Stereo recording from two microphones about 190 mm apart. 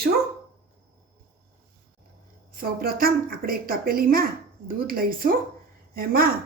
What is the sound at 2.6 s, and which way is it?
A woman's voice, 50° right (ahead or behind).